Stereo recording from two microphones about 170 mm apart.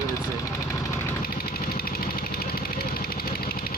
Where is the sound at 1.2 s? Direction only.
60° left (ahead or behind).